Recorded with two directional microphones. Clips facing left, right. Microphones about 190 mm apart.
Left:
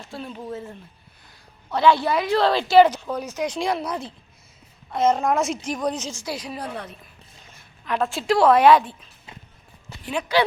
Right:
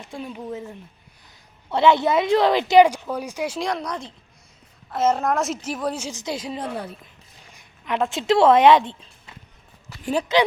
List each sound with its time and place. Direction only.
0.0 s a woman's voice: 15° right (ahead or behind)
3.7 s a woman's voice: 5° left (ahead or behind); by 9.0 s 25° right (ahead or behind)
9.9 s a sound: 25° left (ahead or behind)
10.3 s speech: 20° right (ahead or behind)